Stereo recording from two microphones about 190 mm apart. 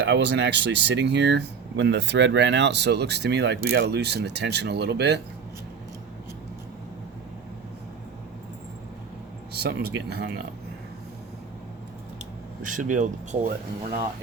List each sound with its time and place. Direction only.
0.0 s speech: 65° right (ahead or behind)
9.6 s speech: 55° right (ahead or behind)
12.6 s speech: 45° right (ahead or behind)